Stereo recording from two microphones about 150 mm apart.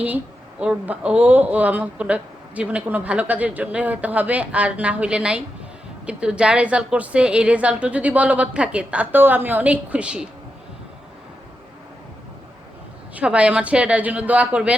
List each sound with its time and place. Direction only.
0.6 s speech: 10° right (ahead or behind)
13.1 s speech: 10° right (ahead or behind)